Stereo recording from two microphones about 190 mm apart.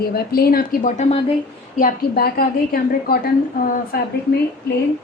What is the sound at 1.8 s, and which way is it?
A woman's voice, 50° left (ahead or behind).